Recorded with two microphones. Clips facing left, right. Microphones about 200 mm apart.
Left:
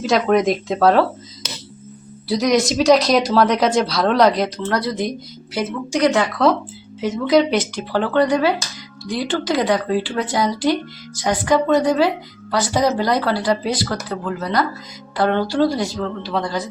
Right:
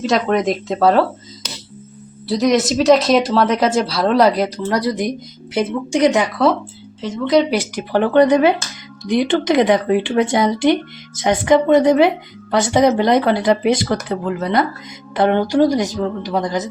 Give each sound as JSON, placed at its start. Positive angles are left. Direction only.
{"t": 0.0, "sound": "a woman's voice", "side_deg": 0}
{"t": 7.0, "sound": "speech", "side_deg": 0}
{"t": 7.5, "sound": "a woman's voice", "side_deg": -15}